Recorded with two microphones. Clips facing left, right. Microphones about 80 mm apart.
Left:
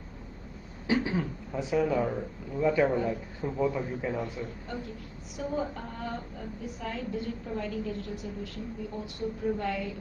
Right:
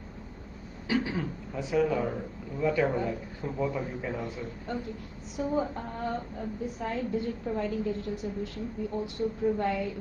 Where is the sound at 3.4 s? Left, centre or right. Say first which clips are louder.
Left 2 dB; centre.